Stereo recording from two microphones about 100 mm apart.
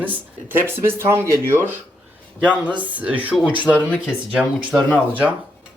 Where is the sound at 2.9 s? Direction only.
15° right (ahead or behind).